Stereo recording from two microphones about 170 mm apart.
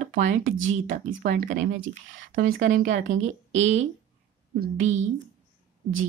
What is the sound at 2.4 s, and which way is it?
Speech, 50° right (ahead or behind).